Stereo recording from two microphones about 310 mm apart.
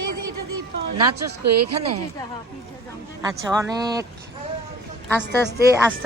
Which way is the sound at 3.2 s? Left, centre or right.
Centre.